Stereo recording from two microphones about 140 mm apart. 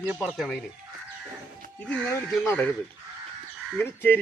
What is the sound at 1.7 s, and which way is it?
Speech, 10° left (ahead or behind).